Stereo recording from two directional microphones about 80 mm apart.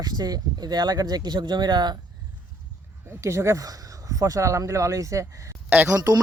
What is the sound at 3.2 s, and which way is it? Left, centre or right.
Speech, right.